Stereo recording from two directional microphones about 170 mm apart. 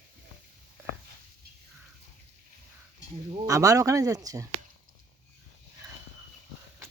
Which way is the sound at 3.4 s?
20° right (ahead or behind).